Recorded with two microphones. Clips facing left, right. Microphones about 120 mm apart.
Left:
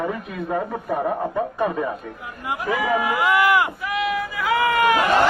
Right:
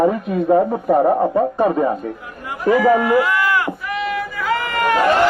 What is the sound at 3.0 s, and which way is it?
Speech, 15° left (ahead or behind).